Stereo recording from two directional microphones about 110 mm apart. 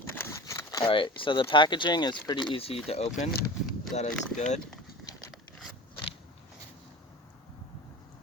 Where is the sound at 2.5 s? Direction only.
60° left (ahead or behind).